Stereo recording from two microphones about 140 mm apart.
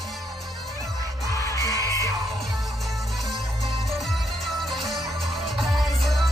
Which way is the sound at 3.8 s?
Centre (ahead or behind).